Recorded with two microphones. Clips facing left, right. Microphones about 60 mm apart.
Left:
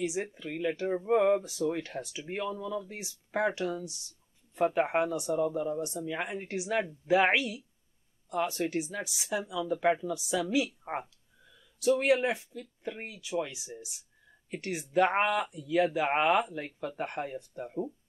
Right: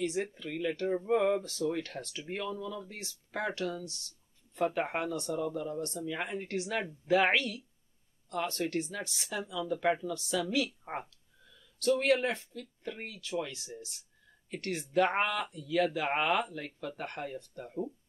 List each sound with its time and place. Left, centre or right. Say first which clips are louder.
0.0 s speech: even; centre